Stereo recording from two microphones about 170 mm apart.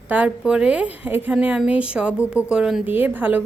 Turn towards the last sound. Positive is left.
turn(degrees=-10)  # may be behind; listen again after turning